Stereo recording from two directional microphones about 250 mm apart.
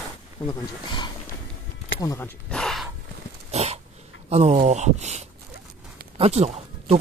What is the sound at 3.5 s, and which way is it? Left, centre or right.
Dog, right.